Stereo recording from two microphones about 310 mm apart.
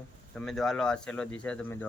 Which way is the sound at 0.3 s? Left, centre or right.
Centre.